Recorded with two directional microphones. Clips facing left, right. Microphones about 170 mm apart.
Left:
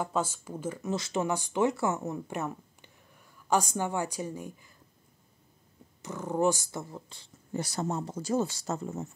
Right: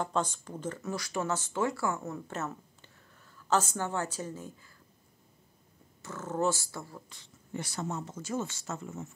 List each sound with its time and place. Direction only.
0.0 s speech: 10° left (ahead or behind)
0.8 s speech: 20° left (ahead or behind)
6.0 s speech: 15° left (ahead or behind); by 9.1 s 35° left (ahead or behind)